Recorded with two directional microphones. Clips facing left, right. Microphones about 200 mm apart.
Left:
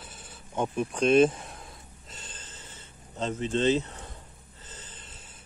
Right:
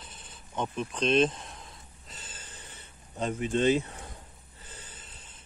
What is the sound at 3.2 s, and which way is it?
Speech, 10° right (ahead or behind).